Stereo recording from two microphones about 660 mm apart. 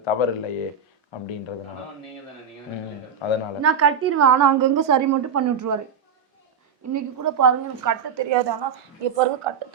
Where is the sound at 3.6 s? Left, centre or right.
Right.